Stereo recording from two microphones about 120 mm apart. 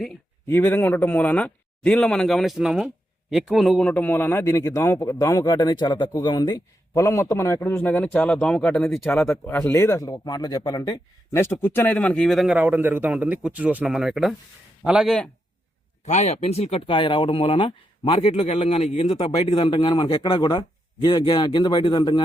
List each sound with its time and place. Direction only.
0.4 s speech: 20° left (ahead or behind); by 3.8 s centre (ahead or behind)
3.8 s speech: 15° left (ahead or behind); by 6.6 s 40° left (ahead or behind)
6.9 s speech: 25° left (ahead or behind)
7.8 s speech: 10° left (ahead or behind)
9.2 s speech: 20° left (ahead or behind)
11.3 s speech: 20° left (ahead or behind); by 12.5 s centre (ahead or behind)
12.5 s a man's voice: 15° right (ahead or behind); by 15.3 s 5° left (ahead or behind)
16.0 s speech: 70° left (ahead or behind)
16.8 s speech: 45° left (ahead or behind)
18.6 s speech: 65° left (ahead or behind)
19.6 s speech: 40° left (ahead or behind)